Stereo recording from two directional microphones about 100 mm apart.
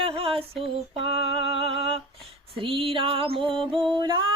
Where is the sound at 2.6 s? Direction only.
65° right (ahead or behind).